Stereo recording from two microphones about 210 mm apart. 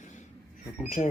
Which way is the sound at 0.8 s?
35° left (ahead or behind).